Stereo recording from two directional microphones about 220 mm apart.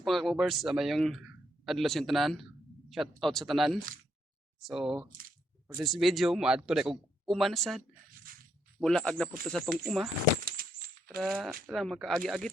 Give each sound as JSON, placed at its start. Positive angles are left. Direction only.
{"t": 0.0, "sound": "speech", "side_deg": 0}
{"t": 8.3, "sound": "squish", "side_deg": -40}
{"t": 8.8, "sound": "speech", "side_deg": 5}
{"t": 10.4, "sound": "coin", "side_deg": -45}
{"t": 11.2, "sound": "speech", "side_deg": 0}